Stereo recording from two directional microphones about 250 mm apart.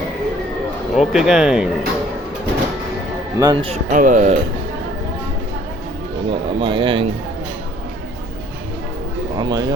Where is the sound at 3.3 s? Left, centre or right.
Centre.